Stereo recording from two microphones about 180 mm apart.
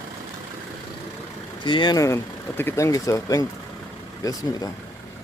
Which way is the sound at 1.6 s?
25° left (ahead or behind).